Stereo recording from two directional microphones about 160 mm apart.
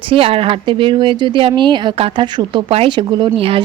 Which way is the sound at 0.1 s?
35° right (ahead or behind).